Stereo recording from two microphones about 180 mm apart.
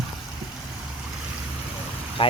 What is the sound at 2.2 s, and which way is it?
Speech, 30° left (ahead or behind).